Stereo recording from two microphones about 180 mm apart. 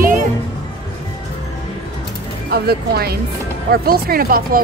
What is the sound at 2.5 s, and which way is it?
Speech, 60° right (ahead or behind).